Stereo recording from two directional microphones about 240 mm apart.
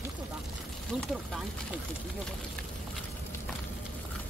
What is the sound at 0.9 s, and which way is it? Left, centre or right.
Speech, centre.